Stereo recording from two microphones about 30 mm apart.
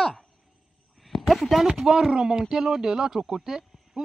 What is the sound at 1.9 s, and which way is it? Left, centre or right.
A woman's voice, right.